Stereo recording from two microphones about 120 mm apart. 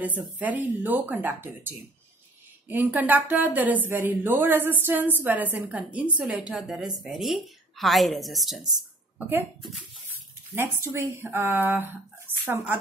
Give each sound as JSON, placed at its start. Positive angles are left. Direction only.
{"t": 0.0, "sound": "a woman's voice", "side_deg": -15}
{"t": 10.5, "sound": "speech", "side_deg": -20}